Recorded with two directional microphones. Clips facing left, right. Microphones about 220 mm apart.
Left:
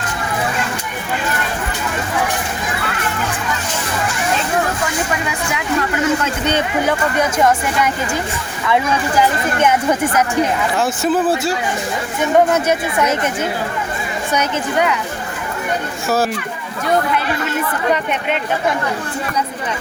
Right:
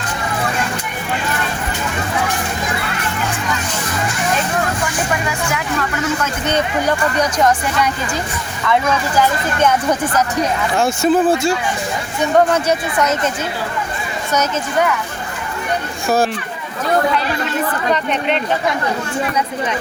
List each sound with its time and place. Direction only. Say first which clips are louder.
10.8 s speech: right 4 dB; 5° left (ahead or behind)
14.3 s speech: right 1 dB; 15° left (ahead or behind)
16.0 s speech: right 2 dB; 5° left (ahead or behind)